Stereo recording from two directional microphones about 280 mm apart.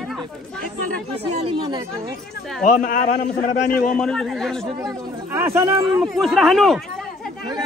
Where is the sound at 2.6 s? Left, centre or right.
Left.